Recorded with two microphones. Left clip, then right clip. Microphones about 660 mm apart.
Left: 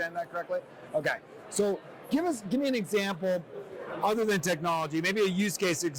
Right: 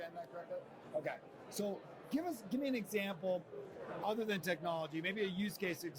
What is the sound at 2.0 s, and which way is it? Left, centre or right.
A man's voice, left.